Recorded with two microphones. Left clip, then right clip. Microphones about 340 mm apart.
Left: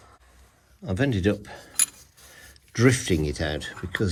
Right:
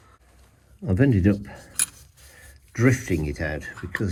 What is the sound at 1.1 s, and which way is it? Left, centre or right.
Speech, centre.